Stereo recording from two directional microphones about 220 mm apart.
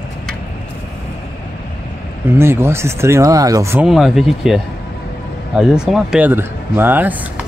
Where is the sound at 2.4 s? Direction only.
10° right (ahead or behind).